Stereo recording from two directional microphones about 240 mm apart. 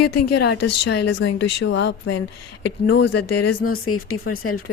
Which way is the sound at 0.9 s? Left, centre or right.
Left.